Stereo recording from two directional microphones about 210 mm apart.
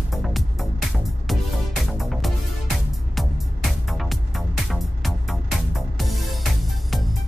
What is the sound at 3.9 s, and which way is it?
Music, centre (ahead or behind).